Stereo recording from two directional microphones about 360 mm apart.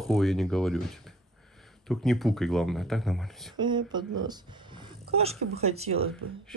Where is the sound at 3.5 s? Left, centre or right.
Centre.